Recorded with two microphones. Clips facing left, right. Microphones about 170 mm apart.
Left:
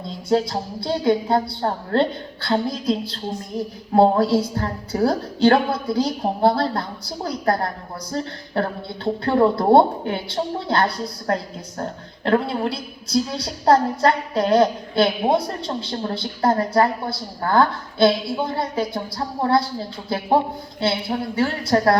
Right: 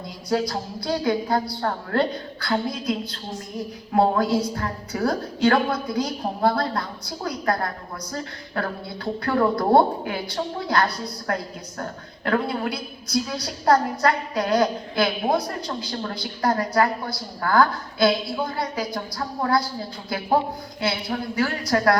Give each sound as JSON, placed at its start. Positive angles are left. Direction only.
{"t": 0.3, "sound": "a woman's voice", "side_deg": 25}